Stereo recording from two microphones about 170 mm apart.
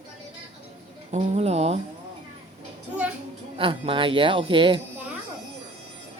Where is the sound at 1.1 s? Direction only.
40° right (ahead or behind).